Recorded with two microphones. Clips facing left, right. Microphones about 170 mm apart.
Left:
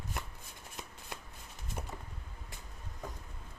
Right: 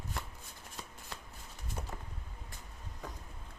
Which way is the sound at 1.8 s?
10° left (ahead or behind).